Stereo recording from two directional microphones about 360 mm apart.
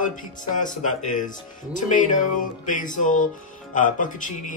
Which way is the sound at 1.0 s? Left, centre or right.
Left.